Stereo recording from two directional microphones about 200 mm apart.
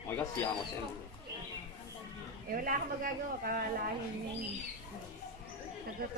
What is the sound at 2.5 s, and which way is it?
Speech, 45° right (ahead or behind).